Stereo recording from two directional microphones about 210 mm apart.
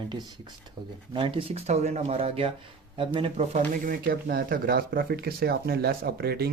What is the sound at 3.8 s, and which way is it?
Speech, 45° right (ahead or behind).